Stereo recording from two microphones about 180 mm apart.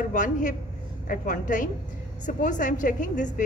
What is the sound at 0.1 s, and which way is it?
A woman's voice, 45° left (ahead or behind).